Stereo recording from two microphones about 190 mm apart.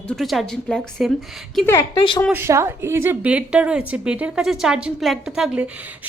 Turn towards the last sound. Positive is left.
turn(degrees=-5)  # may be behind; listen again after turning